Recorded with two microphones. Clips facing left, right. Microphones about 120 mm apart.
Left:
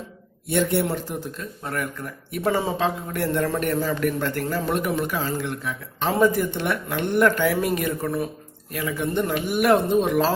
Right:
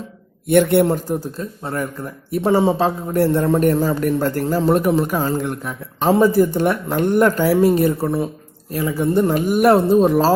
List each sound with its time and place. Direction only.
0.4 s a man's voice: 60° right (ahead or behind)
0.9 s speech: 40° right (ahead or behind)
6.1 s speech: 30° right (ahead or behind)